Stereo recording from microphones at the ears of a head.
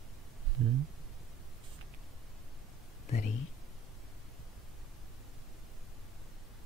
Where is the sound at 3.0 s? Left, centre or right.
Left.